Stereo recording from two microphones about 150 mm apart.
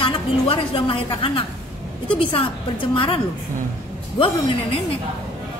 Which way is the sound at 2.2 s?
35° left (ahead or behind).